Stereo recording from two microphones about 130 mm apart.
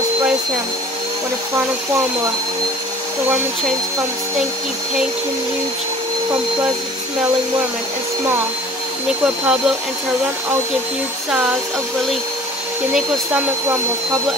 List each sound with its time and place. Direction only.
9.2 s speech: 5° right (ahead or behind)